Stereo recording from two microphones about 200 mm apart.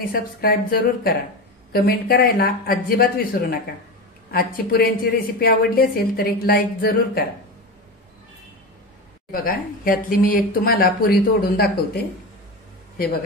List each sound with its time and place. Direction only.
0.1 s a woman's voice: 45° left (ahead or behind)
9.3 s a woman's voice: 45° left (ahead or behind)